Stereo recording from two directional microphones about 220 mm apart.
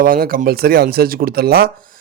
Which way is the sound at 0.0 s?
40° right (ahead or behind).